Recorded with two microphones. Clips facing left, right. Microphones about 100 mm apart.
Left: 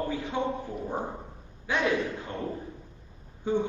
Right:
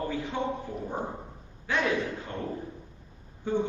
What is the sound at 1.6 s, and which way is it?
Speech, 15° left (ahead or behind).